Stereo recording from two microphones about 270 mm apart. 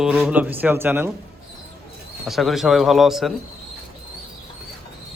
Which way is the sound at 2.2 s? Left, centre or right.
Centre.